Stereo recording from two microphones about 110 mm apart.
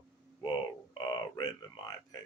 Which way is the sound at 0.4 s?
40° left (ahead or behind).